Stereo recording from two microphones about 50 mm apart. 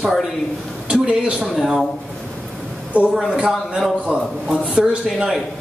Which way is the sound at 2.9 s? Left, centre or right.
Right.